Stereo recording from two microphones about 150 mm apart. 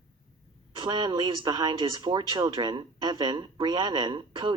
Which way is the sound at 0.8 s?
25° right (ahead or behind).